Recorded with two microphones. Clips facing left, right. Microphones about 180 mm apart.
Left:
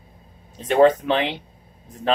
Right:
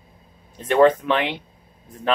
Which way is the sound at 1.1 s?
30° left (ahead or behind).